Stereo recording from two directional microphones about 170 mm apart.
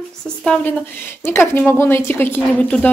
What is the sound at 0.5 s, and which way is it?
A woman's voice, 10° left (ahead or behind).